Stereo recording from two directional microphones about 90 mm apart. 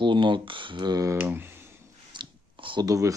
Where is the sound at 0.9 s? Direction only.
40° right (ahead or behind).